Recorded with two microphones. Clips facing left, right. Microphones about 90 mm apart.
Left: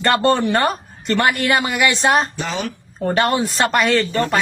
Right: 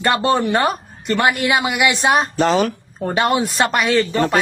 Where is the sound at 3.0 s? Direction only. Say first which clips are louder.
Even; 5° right (ahead or behind).